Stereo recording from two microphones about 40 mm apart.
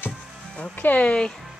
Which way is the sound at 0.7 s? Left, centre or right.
Left.